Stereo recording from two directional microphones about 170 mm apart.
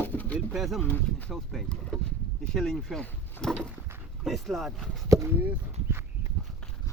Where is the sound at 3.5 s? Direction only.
5° right (ahead or behind).